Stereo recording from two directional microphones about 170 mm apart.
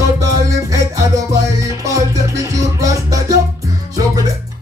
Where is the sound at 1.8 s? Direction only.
20° right (ahead or behind).